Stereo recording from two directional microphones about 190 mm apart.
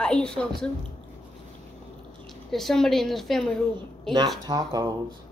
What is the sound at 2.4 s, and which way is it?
A woman's voice, centre (ahead or behind).